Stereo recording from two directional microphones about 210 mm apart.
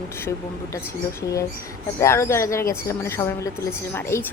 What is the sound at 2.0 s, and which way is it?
A woman's voice, 15° left (ahead or behind).